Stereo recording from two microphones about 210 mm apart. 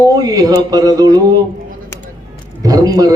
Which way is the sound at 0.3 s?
15° right (ahead or behind).